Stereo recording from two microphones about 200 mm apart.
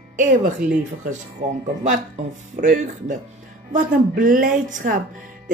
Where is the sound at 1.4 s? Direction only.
35° right (ahead or behind).